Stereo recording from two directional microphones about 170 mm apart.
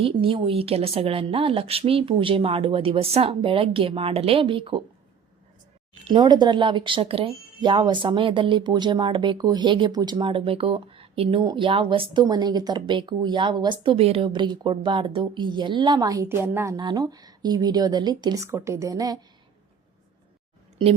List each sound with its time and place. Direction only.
0.0 s a woman's voice: 30° right (ahead or behind)
6.1 s a woman's voice: 25° right (ahead or behind)